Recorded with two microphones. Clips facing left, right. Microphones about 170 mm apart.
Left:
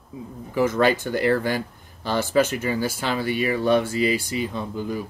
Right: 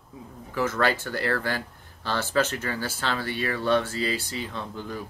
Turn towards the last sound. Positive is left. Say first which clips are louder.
# left 6 dB
turn(degrees=10)  # may be behind; listen again after turning